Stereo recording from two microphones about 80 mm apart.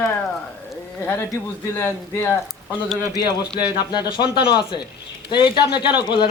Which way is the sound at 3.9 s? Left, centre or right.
Left.